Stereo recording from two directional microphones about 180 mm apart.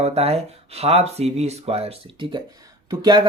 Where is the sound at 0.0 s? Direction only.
35° right (ahead or behind).